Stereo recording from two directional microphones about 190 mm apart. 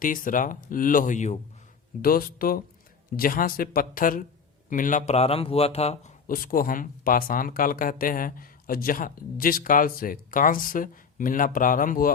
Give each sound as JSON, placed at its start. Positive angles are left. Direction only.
{"t": 0.0, "sound": "speech", "side_deg": 45}
{"t": 2.0, "sound": "speech", "side_deg": 50}
{"t": 6.2, "sound": "speech", "side_deg": 50}